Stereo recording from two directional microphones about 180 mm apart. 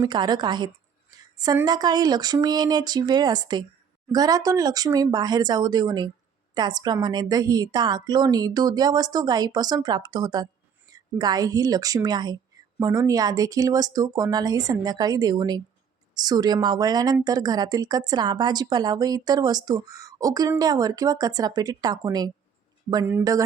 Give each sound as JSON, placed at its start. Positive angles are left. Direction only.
{"t": 0.0, "sound": "speech", "side_deg": -25}